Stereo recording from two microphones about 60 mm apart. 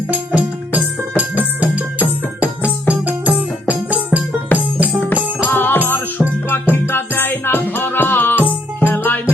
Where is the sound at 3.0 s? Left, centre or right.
Right.